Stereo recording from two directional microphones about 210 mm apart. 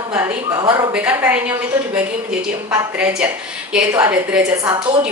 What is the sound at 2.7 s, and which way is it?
A woman's voice, 5° right (ahead or behind).